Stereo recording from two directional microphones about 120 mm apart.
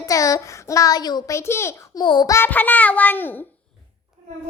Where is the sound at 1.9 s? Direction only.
40° left (ahead or behind).